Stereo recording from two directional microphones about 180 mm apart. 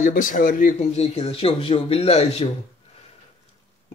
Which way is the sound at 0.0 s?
50° left (ahead or behind).